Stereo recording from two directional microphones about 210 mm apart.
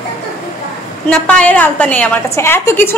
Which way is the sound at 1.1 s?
5° left (ahead or behind).